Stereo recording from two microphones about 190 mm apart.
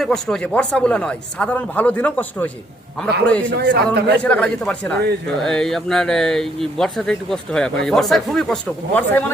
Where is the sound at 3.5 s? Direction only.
60° right (ahead or behind).